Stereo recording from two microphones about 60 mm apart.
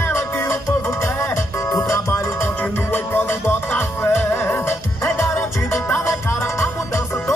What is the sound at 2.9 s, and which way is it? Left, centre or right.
Music, left.